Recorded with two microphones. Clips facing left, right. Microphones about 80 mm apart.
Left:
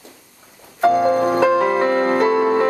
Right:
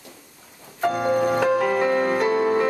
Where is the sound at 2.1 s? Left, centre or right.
Left.